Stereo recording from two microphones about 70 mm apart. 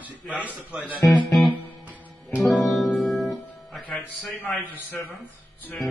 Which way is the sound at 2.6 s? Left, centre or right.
Centre.